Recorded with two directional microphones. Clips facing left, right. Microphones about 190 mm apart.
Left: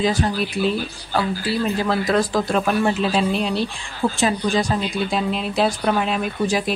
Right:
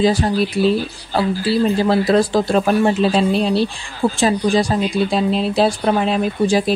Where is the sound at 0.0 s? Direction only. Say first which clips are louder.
Right 5 dB; 35° right (ahead or behind).